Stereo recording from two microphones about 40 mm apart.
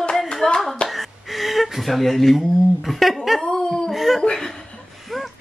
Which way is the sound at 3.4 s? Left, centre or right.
Centre.